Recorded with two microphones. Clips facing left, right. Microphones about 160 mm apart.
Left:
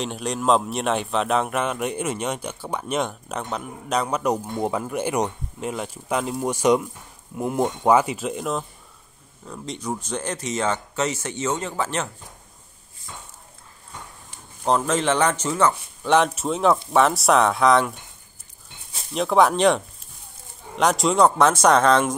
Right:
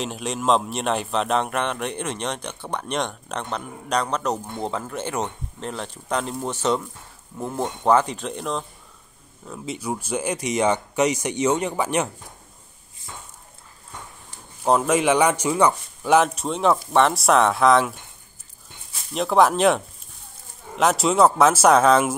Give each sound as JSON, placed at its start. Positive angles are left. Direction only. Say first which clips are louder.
{"t": 0.0, "sound": "speech", "louder": "left 1 dB", "side_deg": 0}
{"t": 9.5, "sound": "speech", "louder": "right 1 dB", "side_deg": -5}
{"t": 14.6, "sound": "speech", "louder": "right 2 dB", "side_deg": -10}
{"t": 19.1, "sound": "speech", "louder": "even", "side_deg": 0}